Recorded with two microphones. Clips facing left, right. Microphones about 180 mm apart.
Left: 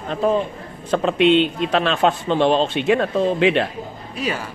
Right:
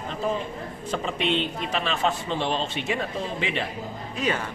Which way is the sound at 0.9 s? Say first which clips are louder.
Left 11 dB; 70° left (ahead or behind).